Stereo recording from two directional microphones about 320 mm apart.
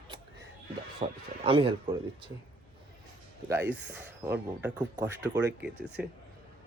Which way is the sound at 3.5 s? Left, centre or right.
Centre.